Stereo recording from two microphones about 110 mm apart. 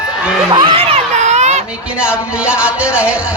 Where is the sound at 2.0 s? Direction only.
10° right (ahead or behind).